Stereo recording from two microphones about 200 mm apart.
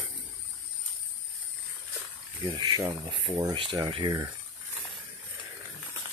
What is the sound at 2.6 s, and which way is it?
Speech, 20° right (ahead or behind).